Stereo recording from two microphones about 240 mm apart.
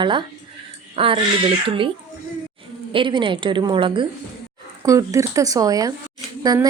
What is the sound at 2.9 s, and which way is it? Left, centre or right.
A woman's voice, right.